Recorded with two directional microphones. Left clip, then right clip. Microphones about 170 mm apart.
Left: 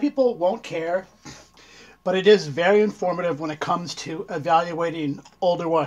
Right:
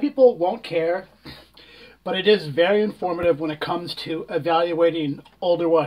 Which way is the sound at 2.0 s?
40° left (ahead or behind).